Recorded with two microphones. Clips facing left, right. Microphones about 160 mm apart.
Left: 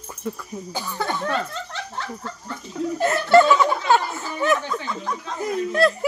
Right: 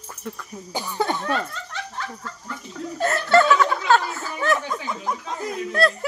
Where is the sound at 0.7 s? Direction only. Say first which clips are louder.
Right 3 dB; 15° right (ahead or behind).